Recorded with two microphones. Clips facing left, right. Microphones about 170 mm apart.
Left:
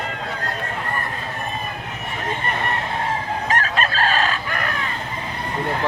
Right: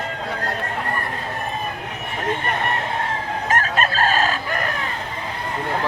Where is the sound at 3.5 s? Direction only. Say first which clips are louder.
Right 2 dB; 45° right (ahead or behind).